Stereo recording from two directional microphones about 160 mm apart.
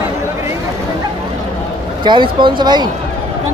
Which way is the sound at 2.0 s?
30° right (ahead or behind).